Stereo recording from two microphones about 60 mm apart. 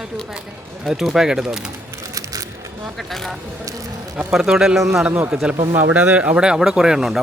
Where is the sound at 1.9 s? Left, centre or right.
Right.